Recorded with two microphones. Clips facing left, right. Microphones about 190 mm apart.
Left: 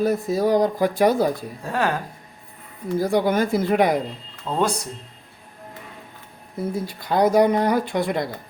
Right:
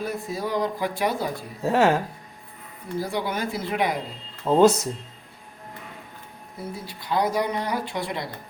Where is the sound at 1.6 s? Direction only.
25° right (ahead or behind).